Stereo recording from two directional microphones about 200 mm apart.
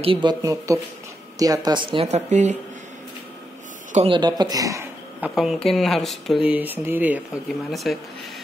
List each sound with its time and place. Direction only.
0.0 s speech: 25° right (ahead or behind)
3.9 s speech: 25° right (ahead or behind)
5.3 s speech: centre (ahead or behind)